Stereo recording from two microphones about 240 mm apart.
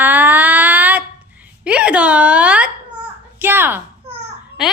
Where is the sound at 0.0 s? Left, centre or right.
Centre.